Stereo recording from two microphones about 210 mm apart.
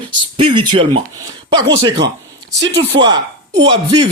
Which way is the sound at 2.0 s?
15° right (ahead or behind).